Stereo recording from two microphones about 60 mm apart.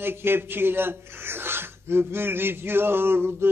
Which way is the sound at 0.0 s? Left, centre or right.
Right.